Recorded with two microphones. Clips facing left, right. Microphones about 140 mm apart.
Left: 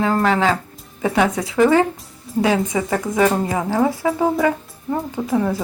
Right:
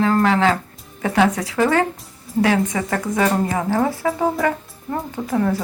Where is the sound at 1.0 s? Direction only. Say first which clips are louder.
Even; 20° left (ahead or behind).